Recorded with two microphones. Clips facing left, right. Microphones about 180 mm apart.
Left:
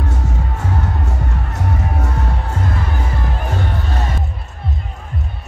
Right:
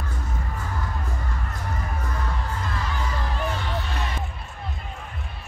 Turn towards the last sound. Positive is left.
turn(degrees=45)  # may be behind; listen again after turning